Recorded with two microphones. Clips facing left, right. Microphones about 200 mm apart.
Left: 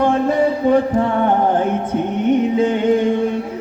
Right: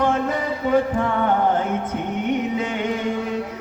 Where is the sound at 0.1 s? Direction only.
30° left (ahead or behind).